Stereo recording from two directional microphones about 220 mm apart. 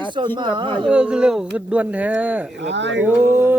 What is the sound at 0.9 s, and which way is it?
Speech, 5° right (ahead or behind).